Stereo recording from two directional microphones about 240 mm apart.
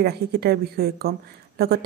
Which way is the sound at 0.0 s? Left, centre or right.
Right.